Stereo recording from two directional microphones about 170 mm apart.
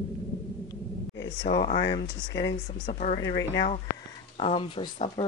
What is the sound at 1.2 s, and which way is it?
Speech, 90° left.